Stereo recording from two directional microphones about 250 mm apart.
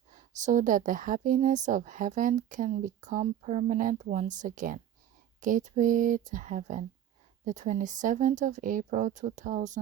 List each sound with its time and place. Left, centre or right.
0.4 s a woman's voice: right